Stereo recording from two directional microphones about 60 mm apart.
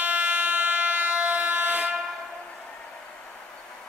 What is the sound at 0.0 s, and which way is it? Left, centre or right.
Train, right.